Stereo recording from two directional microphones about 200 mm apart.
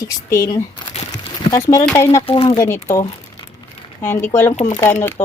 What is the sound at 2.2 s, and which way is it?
Speech, 30° left (ahead or behind).